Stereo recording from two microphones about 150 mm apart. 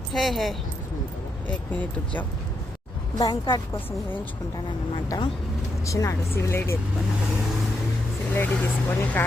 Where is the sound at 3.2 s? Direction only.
30° left (ahead or behind).